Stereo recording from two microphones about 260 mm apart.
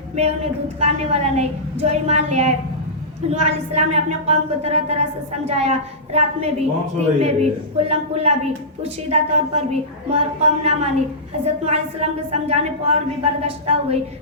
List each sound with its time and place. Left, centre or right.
0.2 s a woman's voice: right